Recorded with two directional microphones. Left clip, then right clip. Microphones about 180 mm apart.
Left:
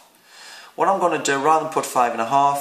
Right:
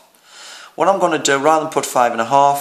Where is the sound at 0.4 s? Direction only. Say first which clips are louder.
Right 3 dB; 45° right (ahead or behind).